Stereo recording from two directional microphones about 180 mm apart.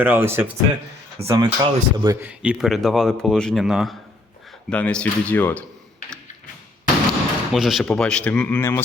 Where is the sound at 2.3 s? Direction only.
5° right (ahead or behind).